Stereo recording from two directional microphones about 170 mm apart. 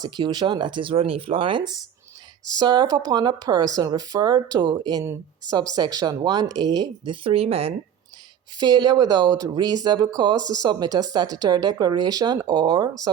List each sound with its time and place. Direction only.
0.0 s speech: 25° right (ahead or behind)
8.5 s speech: 25° right (ahead or behind)